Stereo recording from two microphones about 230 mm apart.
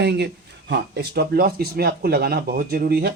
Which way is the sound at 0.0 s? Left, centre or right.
Right.